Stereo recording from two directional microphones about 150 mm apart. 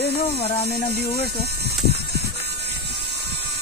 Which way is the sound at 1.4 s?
90° right.